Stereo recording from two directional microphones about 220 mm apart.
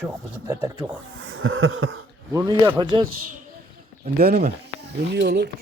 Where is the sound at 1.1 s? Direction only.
65° right (ahead or behind).